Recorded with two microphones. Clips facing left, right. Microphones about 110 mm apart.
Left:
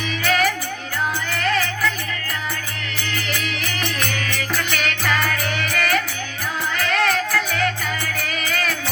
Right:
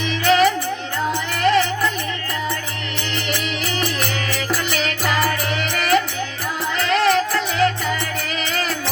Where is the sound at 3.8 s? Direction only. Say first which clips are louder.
Even; 35° right (ahead or behind).